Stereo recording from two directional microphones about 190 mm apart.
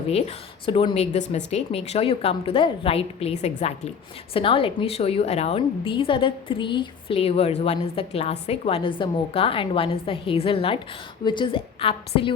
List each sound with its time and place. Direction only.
0.1 s a woman's voice: 30° left (ahead or behind)